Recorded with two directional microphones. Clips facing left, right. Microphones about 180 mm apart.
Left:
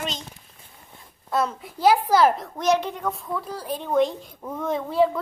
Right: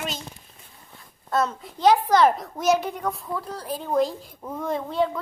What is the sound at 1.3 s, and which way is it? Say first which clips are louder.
A woman's voice: even; 5° left (ahead or behind).